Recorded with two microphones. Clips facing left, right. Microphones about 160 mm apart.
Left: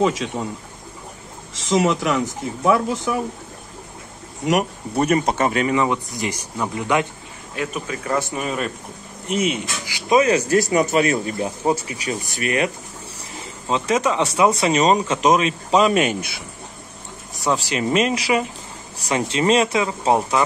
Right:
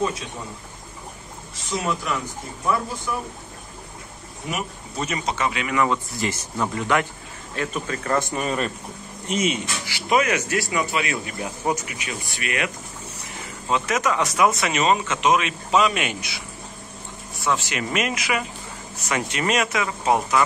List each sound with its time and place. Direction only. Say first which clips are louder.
0.0 s speech: left 6 dB; 90° left
1.5 s speech: left 8 dB; 90° left
4.5 s speech: left 10 dB; 65° left (ahead or behind); by 5.7 s 45° left (ahead or behind)
5.7 s speech: left 2 dB; 20° left (ahead or behind); by 8.7 s 5° left (ahead or behind)
9.8 s speech: left 4 dB; 20° left (ahead or behind)
10.2 s speech: left 7 dB; 35° left (ahead or behind); by 16.4 s 50° left (ahead or behind)
17.5 s speech: left 4 dB; 35° left (ahead or behind)